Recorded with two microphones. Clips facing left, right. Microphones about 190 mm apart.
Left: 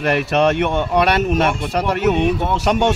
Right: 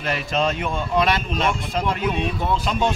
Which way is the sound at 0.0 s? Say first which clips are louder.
Left 7 dB; 70° left (ahead or behind).